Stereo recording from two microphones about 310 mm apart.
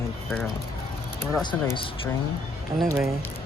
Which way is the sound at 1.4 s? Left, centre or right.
Centre.